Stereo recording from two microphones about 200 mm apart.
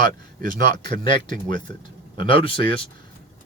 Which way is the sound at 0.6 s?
20° left (ahead or behind).